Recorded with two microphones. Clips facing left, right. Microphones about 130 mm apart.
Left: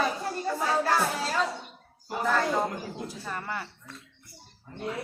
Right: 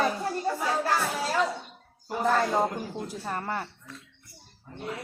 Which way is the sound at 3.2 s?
35° right (ahead or behind).